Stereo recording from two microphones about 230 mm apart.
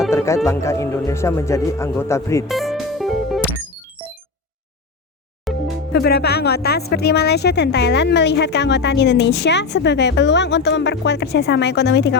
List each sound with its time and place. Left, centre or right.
0.1 s music: centre
0.4 s speech: centre
2.5 s music: centre
5.5 s music: centre
5.9 s a woman's voice: left